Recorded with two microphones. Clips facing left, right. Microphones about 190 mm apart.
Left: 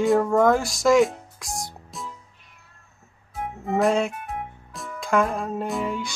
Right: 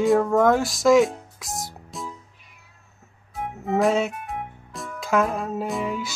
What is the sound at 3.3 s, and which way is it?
Music, centre (ahead or behind).